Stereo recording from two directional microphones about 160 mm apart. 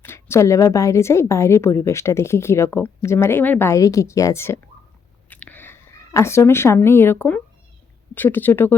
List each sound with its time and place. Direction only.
0.0 s a woman's voice: 15° left (ahead or behind)
5.3 s a sound: 10° left (ahead or behind)
8.1 s a woman's voice: 10° left (ahead or behind)